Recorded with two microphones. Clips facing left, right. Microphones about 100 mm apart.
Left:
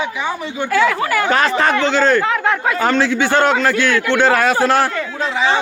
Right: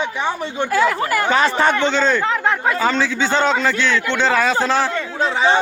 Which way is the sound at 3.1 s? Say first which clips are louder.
Left 3 dB; 10° left (ahead or behind).